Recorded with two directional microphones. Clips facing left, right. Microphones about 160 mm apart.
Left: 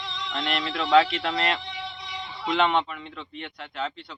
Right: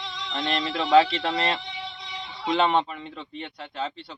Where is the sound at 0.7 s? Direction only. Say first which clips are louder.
Right 1 dB; 25° right (ahead or behind).